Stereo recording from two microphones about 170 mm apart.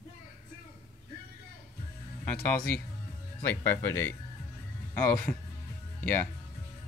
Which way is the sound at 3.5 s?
15° left (ahead or behind).